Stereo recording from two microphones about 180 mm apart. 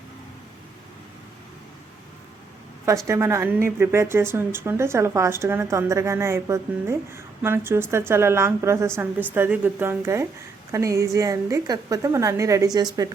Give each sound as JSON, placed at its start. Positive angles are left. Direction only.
{"t": 3.1, "sound": "speech", "side_deg": -15}